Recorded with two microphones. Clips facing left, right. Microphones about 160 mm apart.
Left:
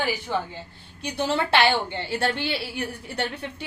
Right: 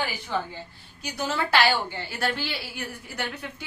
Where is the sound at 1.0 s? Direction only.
30° left (ahead or behind).